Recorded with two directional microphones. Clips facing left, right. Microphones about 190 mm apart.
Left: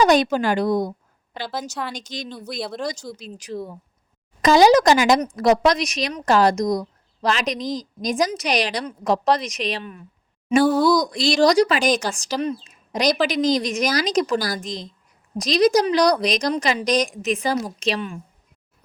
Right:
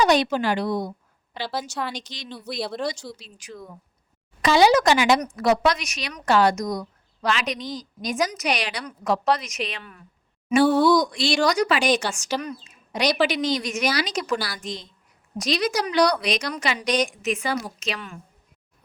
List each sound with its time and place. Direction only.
0.0 s a woman's voice: 45° left (ahead or behind)
1.7 s speech: centre (ahead or behind)
2.0 s speech: 45° left (ahead or behind)
2.6 s speech: centre (ahead or behind)
2.9 s a woman's voice: 45° left (ahead or behind)